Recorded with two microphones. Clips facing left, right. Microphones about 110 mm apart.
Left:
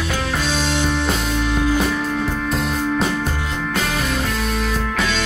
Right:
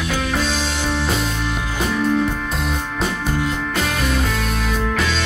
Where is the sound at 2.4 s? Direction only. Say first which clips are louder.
Left 3 dB; centre (ahead or behind).